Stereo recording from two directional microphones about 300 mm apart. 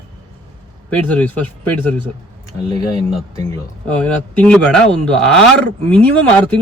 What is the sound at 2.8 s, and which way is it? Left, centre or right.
A man's voice, centre.